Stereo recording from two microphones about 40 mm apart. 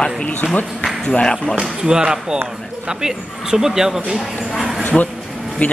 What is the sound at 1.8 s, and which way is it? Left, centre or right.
Speech, centre.